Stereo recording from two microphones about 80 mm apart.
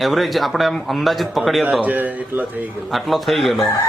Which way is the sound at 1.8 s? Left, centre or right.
Right.